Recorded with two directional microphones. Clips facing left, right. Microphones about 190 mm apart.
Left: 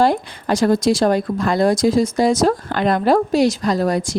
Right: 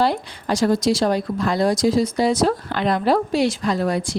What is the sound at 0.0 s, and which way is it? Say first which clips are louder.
Speech: left 4 dB; 50° left (ahead or behind).